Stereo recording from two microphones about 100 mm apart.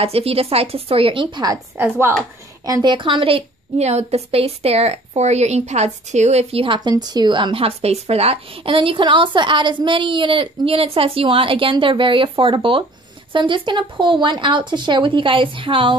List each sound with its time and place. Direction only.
0.0 s a woman's voice: 80° right; by 1.5 s 50° right (ahead or behind)
1.8 s a woman's voice: 25° right (ahead or behind)
2.6 s a woman's voice: 45° right (ahead or behind); by 5.9 s 90° right
6.3 s a woman's voice: 65° right (ahead or behind)
6.8 s speech: 45° right (ahead or behind); by 16.0 s 60° right (ahead or behind)